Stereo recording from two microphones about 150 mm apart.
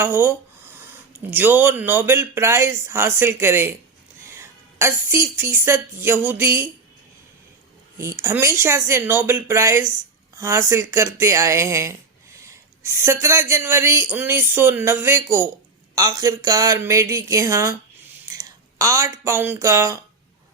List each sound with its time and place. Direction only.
0.0 s a woman's voice: 15° right (ahead or behind)
7.9 s speech: 20° right (ahead or behind)